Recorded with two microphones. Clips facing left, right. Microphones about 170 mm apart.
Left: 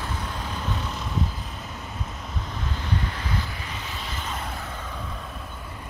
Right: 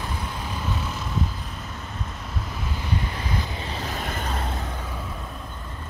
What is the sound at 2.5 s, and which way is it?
Vehicle, 10° right (ahead or behind).